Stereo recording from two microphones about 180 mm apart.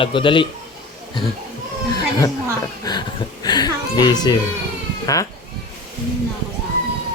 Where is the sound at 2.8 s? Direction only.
25° left (ahead or behind).